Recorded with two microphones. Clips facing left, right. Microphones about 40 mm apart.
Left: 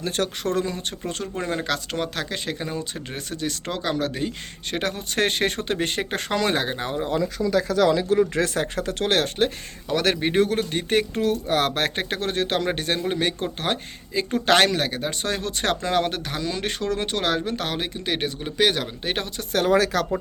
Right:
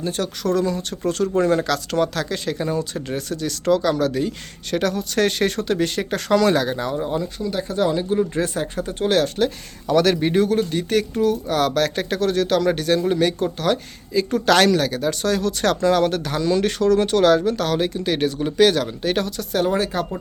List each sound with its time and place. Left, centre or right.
0.0 s speech: left
0.6 s speech: left
7.7 s speech: left
8.3 s speech: left
9.1 s speech: left
10.0 s speech: left
19.5 s speech: left